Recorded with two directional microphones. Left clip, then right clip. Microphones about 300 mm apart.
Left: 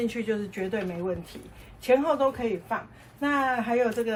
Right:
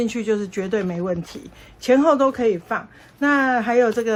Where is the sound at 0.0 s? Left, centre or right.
Centre.